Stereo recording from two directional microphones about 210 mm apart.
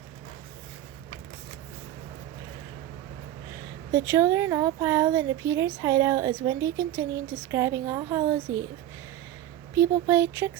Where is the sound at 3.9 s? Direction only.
15° right (ahead or behind).